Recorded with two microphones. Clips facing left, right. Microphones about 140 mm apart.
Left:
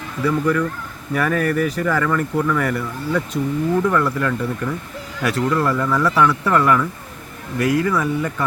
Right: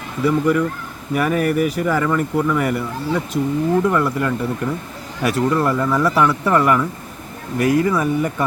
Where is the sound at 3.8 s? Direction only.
15° right (ahead or behind).